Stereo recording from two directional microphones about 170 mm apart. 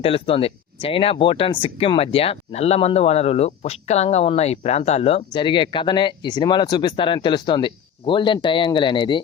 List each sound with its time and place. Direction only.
0.0 s speech: 35° left (ahead or behind)